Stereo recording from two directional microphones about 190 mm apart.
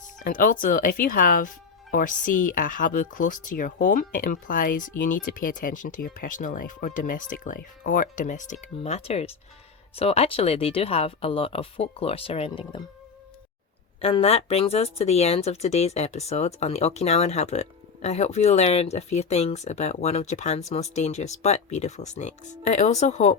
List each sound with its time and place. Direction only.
0.2 s speech: 45° left (ahead or behind); by 12.8 s 25° left (ahead or behind)
14.0 s speech: 30° left (ahead or behind)